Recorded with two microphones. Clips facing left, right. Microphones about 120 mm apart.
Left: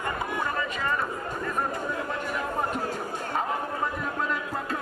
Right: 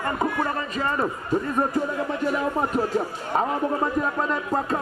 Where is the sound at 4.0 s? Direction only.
40° right (ahead or behind).